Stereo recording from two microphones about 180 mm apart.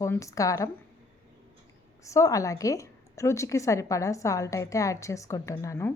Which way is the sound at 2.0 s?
15° left (ahead or behind).